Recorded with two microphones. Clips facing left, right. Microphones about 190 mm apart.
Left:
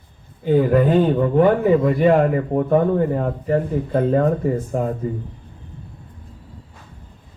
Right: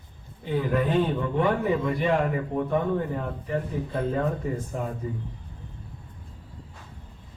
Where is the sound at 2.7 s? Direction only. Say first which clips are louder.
Left 10 dB; 55° left (ahead or behind).